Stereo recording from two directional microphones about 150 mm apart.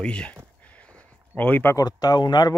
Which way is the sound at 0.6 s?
10° left (ahead or behind).